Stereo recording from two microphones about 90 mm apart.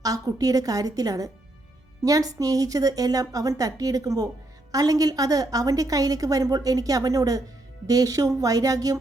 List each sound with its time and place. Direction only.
0.0 s a woman's voice: 40° right (ahead or behind)